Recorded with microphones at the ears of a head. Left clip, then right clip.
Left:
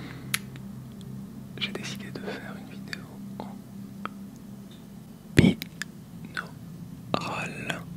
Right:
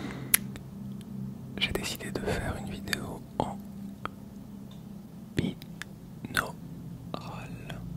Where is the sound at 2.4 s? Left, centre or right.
Right.